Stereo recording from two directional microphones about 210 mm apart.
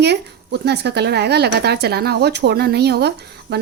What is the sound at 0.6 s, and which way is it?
Speech, 50° right (ahead or behind).